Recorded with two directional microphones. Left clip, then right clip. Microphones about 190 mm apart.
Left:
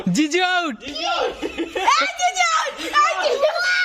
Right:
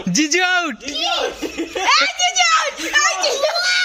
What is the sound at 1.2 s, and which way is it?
Speech, 50° right (ahead or behind).